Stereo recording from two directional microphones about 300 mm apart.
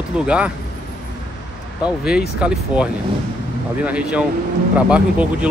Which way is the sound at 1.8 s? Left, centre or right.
Centre.